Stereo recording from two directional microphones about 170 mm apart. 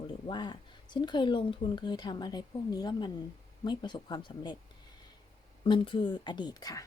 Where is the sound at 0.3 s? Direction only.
25° left (ahead or behind).